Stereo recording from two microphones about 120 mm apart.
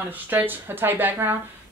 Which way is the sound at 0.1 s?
15° right (ahead or behind).